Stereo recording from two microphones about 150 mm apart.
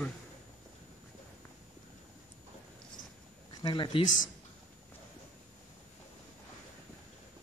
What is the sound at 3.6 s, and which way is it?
Speech, 30° left (ahead or behind).